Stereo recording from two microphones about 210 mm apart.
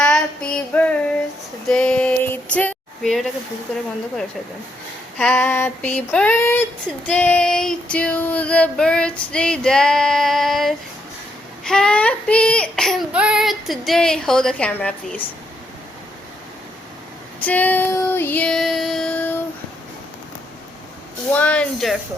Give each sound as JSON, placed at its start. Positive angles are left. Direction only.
{"t": 0.0, "sound": "female singing", "side_deg": 5}
{"t": 1.6, "sound": "a sound", "side_deg": 5}
{"t": 5.1, "sound": "female singing", "side_deg": 10}
{"t": 7.1, "sound": "child singing", "side_deg": 5}
{"t": 17.4, "sound": "female singing", "side_deg": 5}
{"t": 21.3, "sound": "child singing", "side_deg": 5}